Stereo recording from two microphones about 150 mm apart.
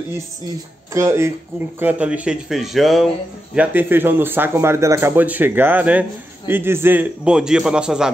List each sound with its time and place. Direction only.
0.9 s a man's voice: 20° right (ahead or behind); by 3.1 s centre (ahead or behind)
3.5 s a man's voice: 15° right (ahead or behind)